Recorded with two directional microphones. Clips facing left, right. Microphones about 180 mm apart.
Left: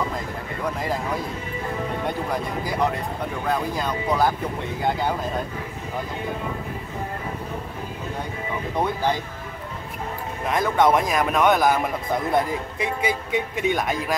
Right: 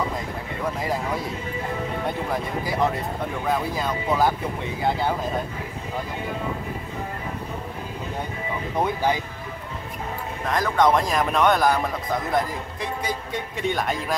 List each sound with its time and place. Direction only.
3.4 s speech: 5° right (ahead or behind)
8.7 s speech: 10° right (ahead or behind)
10.5 s speech: 5° left (ahead or behind)
11.7 s speech: 20° left (ahead or behind)
13.0 s speech: 5° left (ahead or behind)